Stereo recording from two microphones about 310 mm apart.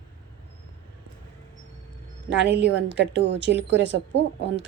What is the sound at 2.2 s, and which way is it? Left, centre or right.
A woman's voice, right.